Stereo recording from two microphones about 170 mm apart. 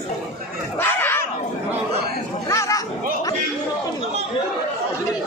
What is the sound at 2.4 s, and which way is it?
Speech, 20° left (ahead or behind).